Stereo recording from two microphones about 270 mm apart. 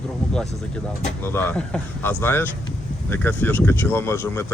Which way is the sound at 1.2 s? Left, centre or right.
Centre.